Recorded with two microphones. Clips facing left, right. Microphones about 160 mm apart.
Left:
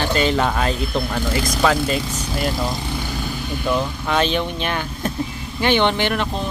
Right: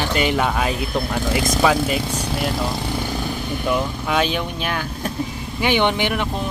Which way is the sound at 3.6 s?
10° right (ahead or behind).